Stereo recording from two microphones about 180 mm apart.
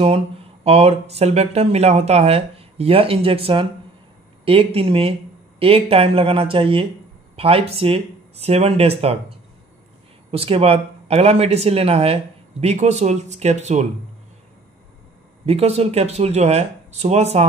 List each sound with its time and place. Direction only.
0.7 s speech: 35° right (ahead or behind)
10.3 s speech: 30° right (ahead or behind)
15.4 s speech: 35° right (ahead or behind)